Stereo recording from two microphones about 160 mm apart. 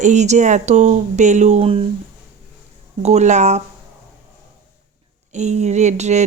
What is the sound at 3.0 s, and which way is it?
Speech, 45° right (ahead or behind).